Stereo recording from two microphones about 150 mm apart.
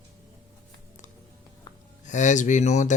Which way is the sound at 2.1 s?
55° left (ahead or behind).